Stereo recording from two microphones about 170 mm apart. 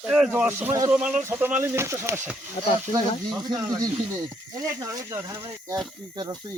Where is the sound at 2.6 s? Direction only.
30° left (ahead or behind).